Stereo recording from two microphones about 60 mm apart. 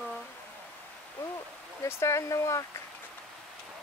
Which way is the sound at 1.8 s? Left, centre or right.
Left.